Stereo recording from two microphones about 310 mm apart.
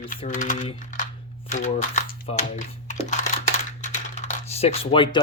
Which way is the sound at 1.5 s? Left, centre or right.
Left.